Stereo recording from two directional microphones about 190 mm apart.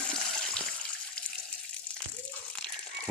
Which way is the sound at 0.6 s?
5° left (ahead or behind).